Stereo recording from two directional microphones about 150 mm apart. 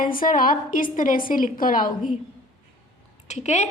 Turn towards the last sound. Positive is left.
turn(degrees=50)  # may be behind; listen again after turning